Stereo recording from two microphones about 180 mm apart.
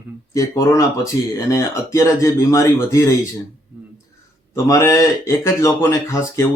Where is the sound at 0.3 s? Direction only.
20° left (ahead or behind).